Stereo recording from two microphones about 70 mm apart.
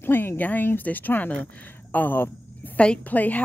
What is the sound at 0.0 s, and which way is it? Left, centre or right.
Speech, left.